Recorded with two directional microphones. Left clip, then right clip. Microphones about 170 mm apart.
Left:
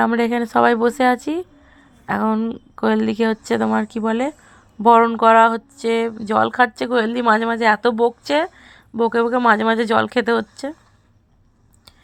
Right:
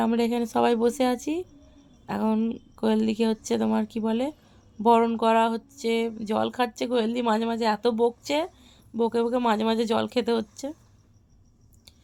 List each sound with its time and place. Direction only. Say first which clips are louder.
0.0 s a woman's voice: left 7 dB; 10° left (ahead or behind)